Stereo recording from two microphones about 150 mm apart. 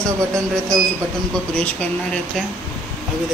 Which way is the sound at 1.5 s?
10° left (ahead or behind).